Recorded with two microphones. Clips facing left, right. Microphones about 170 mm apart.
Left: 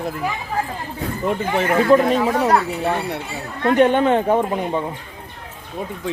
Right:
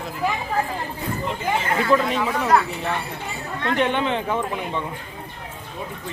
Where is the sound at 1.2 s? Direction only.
55° left (ahead or behind).